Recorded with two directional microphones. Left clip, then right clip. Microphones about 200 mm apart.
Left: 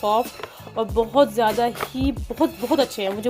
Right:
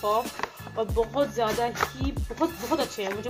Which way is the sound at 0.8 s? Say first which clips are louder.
Left 7 dB; 45° left (ahead or behind).